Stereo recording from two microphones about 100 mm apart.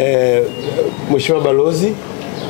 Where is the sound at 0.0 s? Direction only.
20° left (ahead or behind).